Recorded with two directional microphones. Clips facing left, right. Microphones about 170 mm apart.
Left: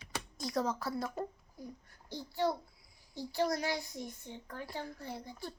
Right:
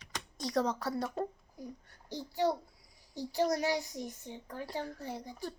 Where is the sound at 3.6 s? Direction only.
40° right (ahead or behind).